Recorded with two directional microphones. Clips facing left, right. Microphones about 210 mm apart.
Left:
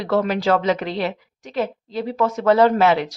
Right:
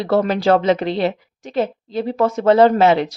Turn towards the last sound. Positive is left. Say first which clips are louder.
# right 3 dB
turn(degrees=-25)  # may be behind; listen again after turning